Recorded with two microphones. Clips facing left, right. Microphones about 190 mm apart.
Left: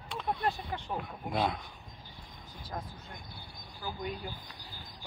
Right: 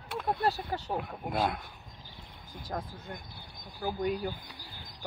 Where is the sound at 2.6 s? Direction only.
50° right (ahead or behind).